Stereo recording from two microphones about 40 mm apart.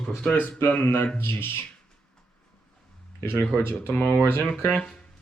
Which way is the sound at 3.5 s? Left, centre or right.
Left.